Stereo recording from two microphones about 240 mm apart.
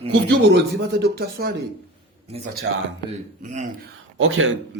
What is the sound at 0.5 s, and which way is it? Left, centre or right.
A man's voice, right.